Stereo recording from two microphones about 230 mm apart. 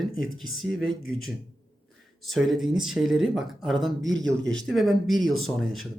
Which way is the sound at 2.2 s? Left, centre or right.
Centre.